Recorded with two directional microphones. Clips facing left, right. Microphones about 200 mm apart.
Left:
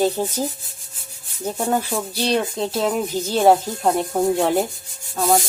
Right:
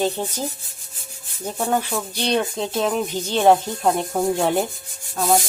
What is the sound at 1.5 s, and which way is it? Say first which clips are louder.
Speech: left 1 dB; 5° left (ahead or behind).